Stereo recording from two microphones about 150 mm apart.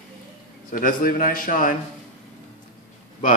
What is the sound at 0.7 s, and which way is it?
Speech, 65° left (ahead or behind).